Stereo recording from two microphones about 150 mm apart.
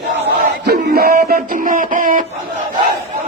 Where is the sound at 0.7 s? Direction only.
90° right; by 2.2 s 60° right (ahead or behind).